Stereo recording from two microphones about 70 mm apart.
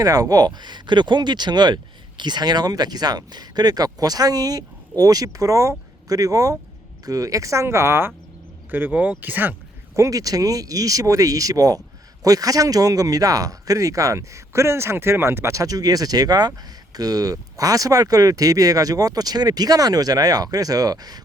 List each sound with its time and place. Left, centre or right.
0.0 s speech: right
8.7 s speech: right
9.9 s speech: right